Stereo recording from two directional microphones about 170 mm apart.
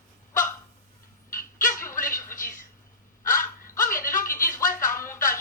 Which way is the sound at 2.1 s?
15° left (ahead or behind).